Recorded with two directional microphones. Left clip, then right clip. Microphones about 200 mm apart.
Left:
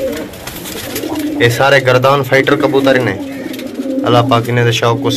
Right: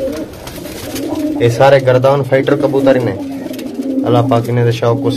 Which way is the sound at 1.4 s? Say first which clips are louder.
Right 1 dB; 5° right (ahead or behind).